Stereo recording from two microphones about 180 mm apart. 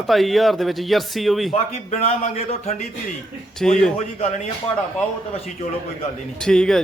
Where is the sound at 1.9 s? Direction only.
35° left (ahead or behind).